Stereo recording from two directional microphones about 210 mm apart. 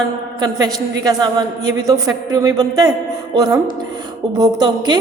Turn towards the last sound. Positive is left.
turn(degrees=-20)  # may be behind; listen again after turning